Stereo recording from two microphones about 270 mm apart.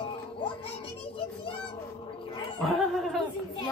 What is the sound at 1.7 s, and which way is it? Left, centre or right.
Cat, centre.